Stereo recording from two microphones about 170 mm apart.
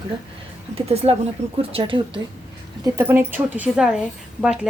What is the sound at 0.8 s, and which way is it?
Speech, 35° right (ahead or behind).